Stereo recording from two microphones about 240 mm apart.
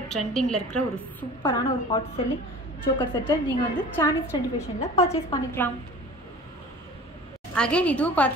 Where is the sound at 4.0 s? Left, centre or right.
Centre.